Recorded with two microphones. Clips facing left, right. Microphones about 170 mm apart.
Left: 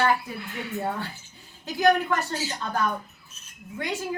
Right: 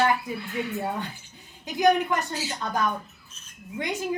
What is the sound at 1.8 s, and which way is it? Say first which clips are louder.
Speech: even; 20° right (ahead or behind).